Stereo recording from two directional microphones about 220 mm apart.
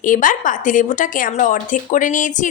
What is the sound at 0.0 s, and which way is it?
A woman's voice, 35° left (ahead or behind).